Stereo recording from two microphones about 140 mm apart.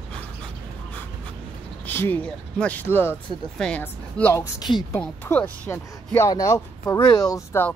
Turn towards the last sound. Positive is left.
turn(degrees=25)  # may be behind; listen again after turning